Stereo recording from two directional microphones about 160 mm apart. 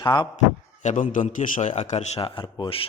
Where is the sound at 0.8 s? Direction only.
50° left (ahead or behind).